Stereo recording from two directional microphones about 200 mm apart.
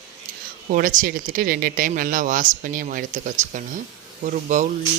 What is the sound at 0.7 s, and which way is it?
Speech, 40° right (ahead or behind).